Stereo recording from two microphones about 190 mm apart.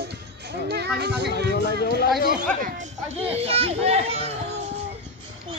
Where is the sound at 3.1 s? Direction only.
30° right (ahead or behind).